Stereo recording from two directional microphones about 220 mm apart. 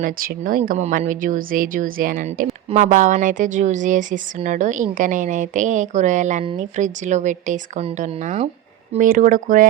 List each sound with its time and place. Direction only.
0.0 s speech: 40° right (ahead or behind)